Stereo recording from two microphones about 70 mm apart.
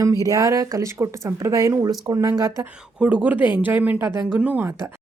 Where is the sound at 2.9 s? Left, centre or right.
Right.